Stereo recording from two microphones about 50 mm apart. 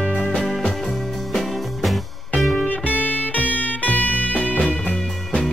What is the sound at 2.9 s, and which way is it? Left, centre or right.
Music, left.